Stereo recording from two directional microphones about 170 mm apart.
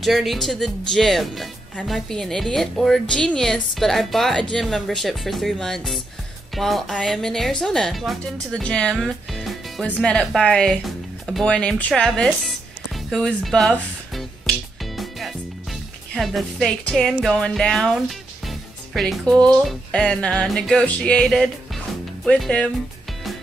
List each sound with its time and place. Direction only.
0.0 s speech: centre (ahead or behind)
15.0 s music: centre (ahead or behind)
16.2 s speech: centre (ahead or behind)